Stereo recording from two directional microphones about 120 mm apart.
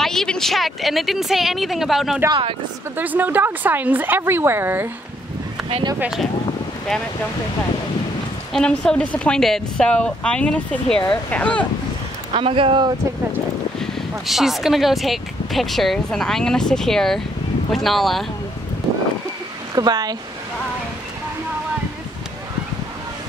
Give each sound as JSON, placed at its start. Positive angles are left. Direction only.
{"t": 0.0, "sound": "speech", "side_deg": 5}
{"t": 3.0, "sound": "a woman's voice", "side_deg": -15}
{"t": 5.9, "sound": "speech", "side_deg": -5}
{"t": 8.5, "sound": "a woman's voice", "side_deg": 5}
{"t": 12.3, "sound": "speech", "side_deg": -50}
{"t": 13.7, "sound": "speech", "side_deg": 0}
{"t": 19.7, "sound": "speech", "side_deg": -35}